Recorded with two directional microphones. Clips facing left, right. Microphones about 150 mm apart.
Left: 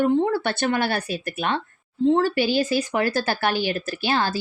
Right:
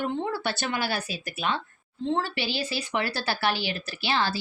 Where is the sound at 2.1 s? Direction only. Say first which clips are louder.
Left 9 dB; 45° left (ahead or behind).